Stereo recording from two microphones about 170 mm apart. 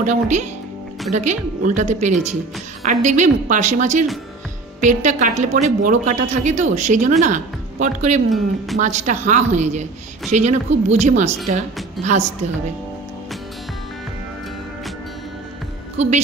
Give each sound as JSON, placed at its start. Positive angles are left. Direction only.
{"t": 0.0, "sound": "a woman's voice", "side_deg": -45}